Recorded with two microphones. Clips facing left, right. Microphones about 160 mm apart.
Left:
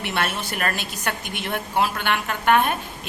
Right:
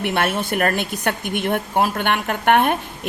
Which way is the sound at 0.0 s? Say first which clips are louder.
Right 5 dB; 55° right (ahead or behind).